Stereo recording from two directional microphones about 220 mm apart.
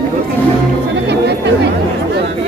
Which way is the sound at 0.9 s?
50° right (ahead or behind).